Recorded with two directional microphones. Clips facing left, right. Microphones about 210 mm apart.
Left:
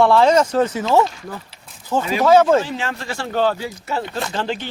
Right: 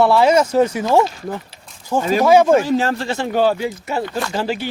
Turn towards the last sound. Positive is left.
turn(degrees=-10)  # may be behind; listen again after turning